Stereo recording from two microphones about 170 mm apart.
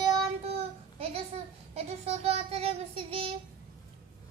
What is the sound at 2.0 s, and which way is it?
Child singing, 40° right (ahead or behind).